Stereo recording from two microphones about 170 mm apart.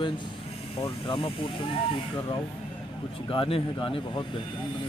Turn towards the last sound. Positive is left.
turn(degrees=30)  # may be behind; listen again after turning